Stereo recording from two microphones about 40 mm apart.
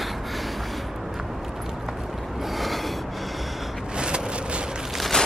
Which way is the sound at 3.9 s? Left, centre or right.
Right.